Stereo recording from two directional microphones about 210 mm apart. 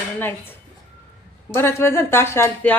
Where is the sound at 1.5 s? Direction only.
10° left (ahead or behind).